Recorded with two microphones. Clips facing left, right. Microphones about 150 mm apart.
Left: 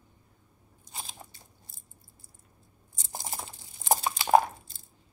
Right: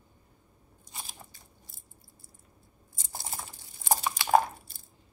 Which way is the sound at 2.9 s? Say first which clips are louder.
Left 2 dB; 20° left (ahead or behind).